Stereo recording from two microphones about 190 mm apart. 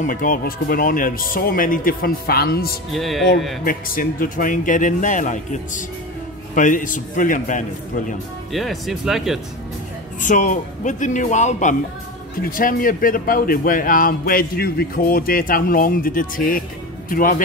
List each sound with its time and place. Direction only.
0.0 s speech: 45° left (ahead or behind)
2.9 s speech: centre (ahead or behind)
3.6 s speech: 50° left (ahead or behind)
8.5 s speech: centre (ahead or behind)
10.2 s speech: 40° left (ahead or behind)